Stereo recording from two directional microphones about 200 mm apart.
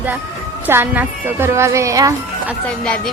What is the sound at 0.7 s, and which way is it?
Speech, 10° right (ahead or behind).